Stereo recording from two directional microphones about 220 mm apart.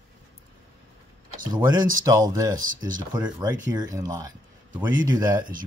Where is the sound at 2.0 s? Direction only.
15° right (ahead or behind).